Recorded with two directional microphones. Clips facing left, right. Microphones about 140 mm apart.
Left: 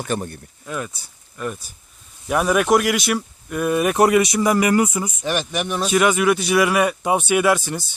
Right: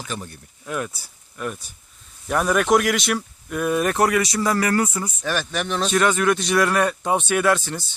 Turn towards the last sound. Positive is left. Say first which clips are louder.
# left 2 dB
turn(degrees=10)  # may be behind; listen again after turning